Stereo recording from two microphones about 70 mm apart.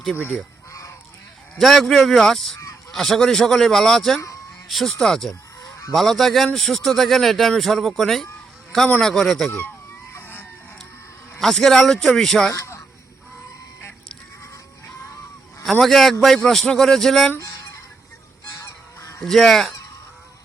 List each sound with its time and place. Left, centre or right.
0.7 s goose: left
1.5 s speech: centre
10.1 s a sound: left
11.3 s speech: centre
12.5 s a sound: left
15.8 s speech: centre
17.4 s fowl: left
18.5 s goose: left
19.2 s speech: centre